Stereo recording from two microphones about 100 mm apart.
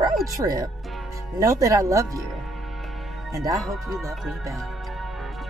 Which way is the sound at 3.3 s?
35° right (ahead or behind).